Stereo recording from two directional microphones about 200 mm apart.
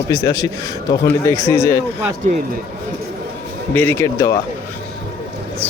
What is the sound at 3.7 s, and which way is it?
Speech, 10° left (ahead or behind).